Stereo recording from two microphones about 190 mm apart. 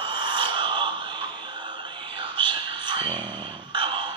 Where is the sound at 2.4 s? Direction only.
25° right (ahead or behind).